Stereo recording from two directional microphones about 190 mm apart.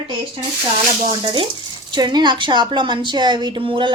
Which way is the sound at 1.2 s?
25° right (ahead or behind).